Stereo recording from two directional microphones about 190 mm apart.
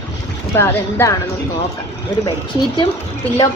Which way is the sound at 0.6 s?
15° left (ahead or behind).